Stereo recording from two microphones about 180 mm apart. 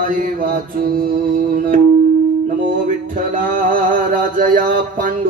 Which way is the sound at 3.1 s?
50° right (ahead or behind).